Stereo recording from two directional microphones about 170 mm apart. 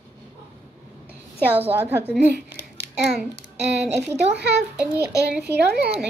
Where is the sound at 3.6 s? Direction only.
90° right.